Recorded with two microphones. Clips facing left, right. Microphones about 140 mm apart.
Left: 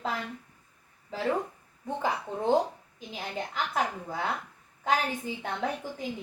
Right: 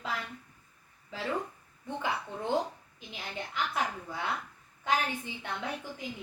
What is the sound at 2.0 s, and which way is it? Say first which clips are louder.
A woman's voice: left 4 dB; 40° left (ahead or behind).